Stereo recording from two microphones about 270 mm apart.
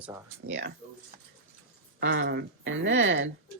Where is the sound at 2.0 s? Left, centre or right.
Right.